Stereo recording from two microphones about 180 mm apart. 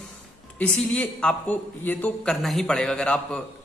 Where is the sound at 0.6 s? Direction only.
5° left (ahead or behind).